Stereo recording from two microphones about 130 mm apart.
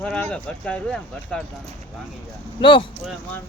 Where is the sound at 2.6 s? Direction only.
40° left (ahead or behind).